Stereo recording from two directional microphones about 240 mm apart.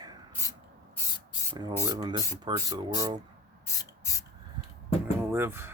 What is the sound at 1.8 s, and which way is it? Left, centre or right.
Speech, centre.